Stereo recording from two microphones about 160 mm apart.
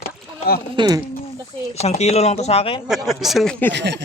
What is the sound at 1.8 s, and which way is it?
Speech, 40° left (ahead or behind).